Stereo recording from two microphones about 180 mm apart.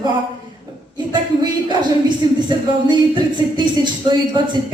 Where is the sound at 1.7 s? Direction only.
25° right (ahead or behind).